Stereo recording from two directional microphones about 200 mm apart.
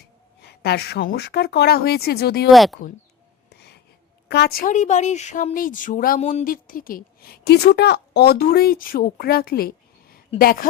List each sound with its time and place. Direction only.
0.0 s a woman's voice: 55° left (ahead or behind)
2.5 s speech: centre (ahead or behind)
3.5 s a sound: 55° left (ahead or behind)
4.3 s speech: 55° left (ahead or behind)